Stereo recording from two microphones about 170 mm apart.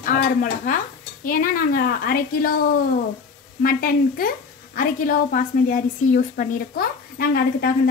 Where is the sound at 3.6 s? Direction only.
55° left (ahead or behind).